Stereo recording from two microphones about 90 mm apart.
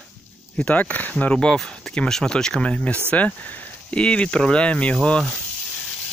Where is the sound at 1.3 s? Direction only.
5° left (ahead or behind).